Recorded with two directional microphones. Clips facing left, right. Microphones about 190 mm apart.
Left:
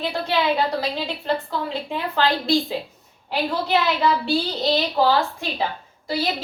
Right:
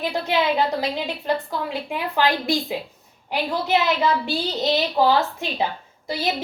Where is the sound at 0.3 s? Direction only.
20° right (ahead or behind).